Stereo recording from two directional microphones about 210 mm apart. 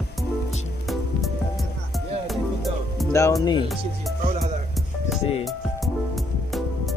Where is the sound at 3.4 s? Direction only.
20° left (ahead or behind).